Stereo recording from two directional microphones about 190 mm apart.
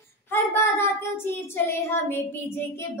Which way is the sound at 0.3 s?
15° left (ahead or behind).